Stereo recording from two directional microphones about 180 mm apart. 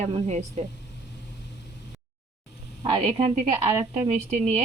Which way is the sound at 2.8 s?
35° right (ahead or behind).